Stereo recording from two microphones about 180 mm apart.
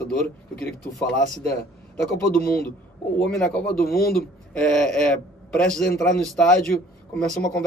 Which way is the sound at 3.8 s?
55° left (ahead or behind).